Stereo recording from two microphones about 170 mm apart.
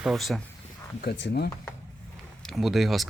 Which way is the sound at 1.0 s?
70° left (ahead or behind).